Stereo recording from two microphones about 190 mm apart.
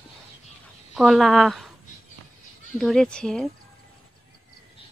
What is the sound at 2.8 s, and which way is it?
Speech, centre (ahead or behind).